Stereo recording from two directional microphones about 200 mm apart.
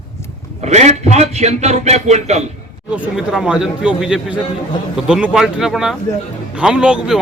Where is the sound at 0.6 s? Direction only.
35° right (ahead or behind).